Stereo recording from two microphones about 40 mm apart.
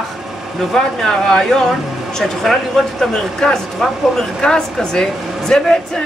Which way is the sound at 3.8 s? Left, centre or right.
Centre.